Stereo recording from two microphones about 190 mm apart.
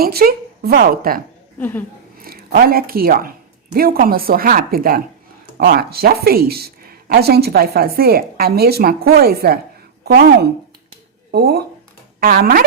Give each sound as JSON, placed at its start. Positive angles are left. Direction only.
{"t": 0.0, "sound": "speech", "side_deg": -50}
{"t": 1.5, "sound": "speech", "side_deg": 10}
{"t": 2.1, "sound": "a woman's voice", "side_deg": -50}